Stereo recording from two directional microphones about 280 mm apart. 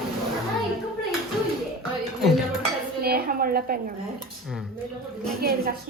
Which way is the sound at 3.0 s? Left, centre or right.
Right.